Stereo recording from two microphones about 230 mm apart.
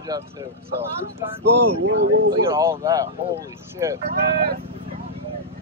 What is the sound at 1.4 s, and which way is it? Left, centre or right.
Speech, right.